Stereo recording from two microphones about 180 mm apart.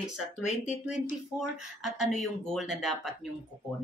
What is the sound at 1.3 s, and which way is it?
Speech, centre (ahead or behind).